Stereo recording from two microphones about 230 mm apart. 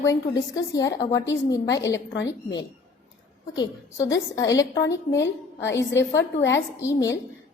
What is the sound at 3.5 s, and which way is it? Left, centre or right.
A woman's voice, centre.